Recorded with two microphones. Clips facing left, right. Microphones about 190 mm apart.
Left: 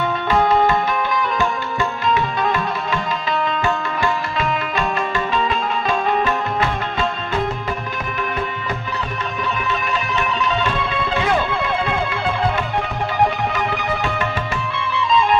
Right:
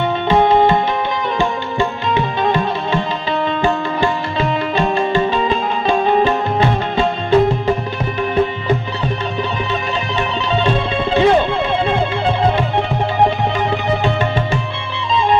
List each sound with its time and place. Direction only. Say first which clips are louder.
0.3 s music: right 4 dB; 25° right (ahead or behind)
10.2 s music: right 3 dB; 25° right (ahead or behind)
13.2 s music: right 3 dB; 25° right (ahead or behind)